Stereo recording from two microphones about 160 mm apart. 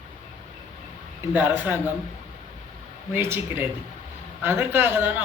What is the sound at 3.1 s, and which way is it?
A man's voice, 15° right (ahead or behind).